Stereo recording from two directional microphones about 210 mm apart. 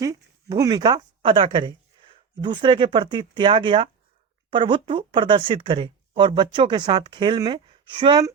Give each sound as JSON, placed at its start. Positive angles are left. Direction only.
{"t": 0.0, "sound": "speech", "side_deg": -15}